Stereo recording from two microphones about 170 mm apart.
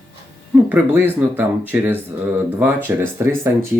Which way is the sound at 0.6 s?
10° right (ahead or behind).